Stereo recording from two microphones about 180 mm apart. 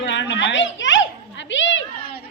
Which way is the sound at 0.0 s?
85° left.